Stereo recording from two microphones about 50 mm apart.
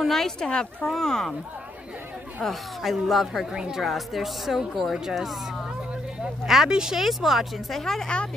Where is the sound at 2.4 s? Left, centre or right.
Centre.